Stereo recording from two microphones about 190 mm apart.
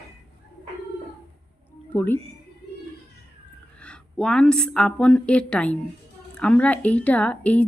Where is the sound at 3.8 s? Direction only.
5° left (ahead or behind).